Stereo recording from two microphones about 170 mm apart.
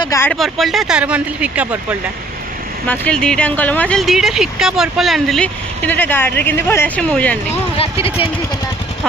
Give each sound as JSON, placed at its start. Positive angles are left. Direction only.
{"t": 0.0, "sound": "speech", "side_deg": 20}
{"t": 0.3, "sound": "speech", "side_deg": 0}
{"t": 2.8, "sound": "speech", "side_deg": 10}